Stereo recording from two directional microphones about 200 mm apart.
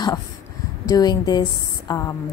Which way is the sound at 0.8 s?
20° left (ahead or behind).